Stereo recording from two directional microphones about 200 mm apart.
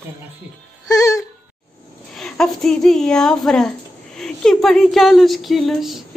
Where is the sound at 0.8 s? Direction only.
15° left (ahead or behind).